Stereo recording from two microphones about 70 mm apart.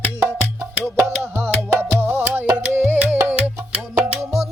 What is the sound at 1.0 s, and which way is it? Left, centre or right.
Music, right.